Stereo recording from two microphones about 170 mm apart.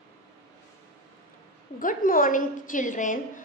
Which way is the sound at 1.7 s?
55° left (ahead or behind).